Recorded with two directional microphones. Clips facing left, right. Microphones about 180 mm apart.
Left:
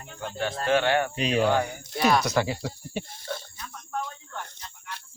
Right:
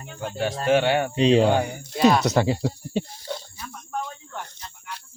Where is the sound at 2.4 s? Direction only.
30° right (ahead or behind).